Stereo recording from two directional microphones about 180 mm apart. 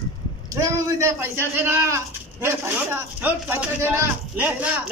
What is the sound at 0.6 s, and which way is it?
A man's voice, 15° right (ahead or behind).